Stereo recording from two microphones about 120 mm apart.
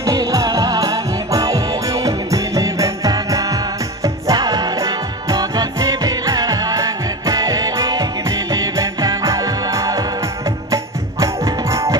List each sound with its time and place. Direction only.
0.0 s music: 30° right (ahead or behind)